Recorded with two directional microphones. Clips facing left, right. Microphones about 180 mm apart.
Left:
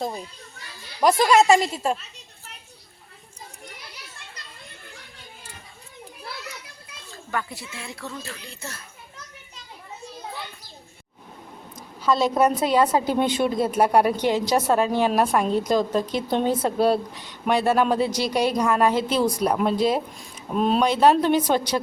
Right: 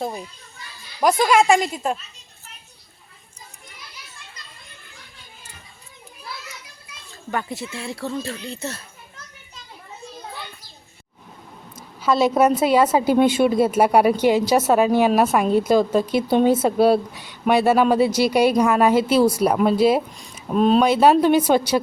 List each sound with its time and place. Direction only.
1.0 s a woman's voice: centre (ahead or behind)
7.3 s speech: 25° right (ahead or behind)
12.0 s a woman's voice: 5° right (ahead or behind)
20.6 s a woman's voice: 5° left (ahead or behind)
20.8 s a woman's voice: 10° right (ahead or behind)